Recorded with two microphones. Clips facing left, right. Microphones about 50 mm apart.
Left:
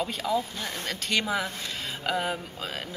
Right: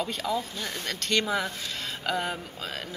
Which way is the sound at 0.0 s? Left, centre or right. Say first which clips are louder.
Left 2 dB; centre.